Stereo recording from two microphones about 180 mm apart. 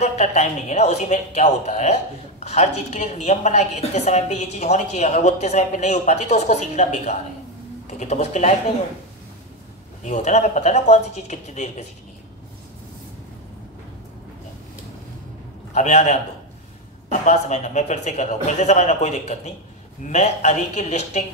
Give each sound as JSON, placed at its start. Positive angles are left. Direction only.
{"t": 0.0, "sound": "a woman's voice", "side_deg": 40}
{"t": 10.0, "sound": "a woman's voice", "side_deg": 40}
{"t": 15.7, "sound": "a woman's voice", "side_deg": 40}